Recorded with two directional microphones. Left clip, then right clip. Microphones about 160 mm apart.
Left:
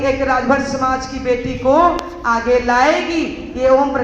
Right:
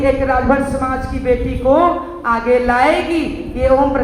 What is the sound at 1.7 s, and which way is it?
A woman's voice, 20° left (ahead or behind).